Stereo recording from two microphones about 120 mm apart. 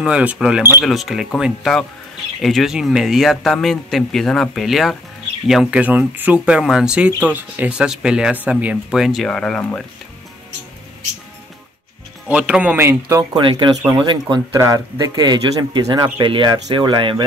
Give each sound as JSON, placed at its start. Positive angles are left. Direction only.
{"t": 0.0, "sound": "speech", "side_deg": -10}
{"t": 12.3, "sound": "speech", "side_deg": -10}
{"t": 13.3, "sound": "speech", "side_deg": -40}
{"t": 14.6, "sound": "speech", "side_deg": -30}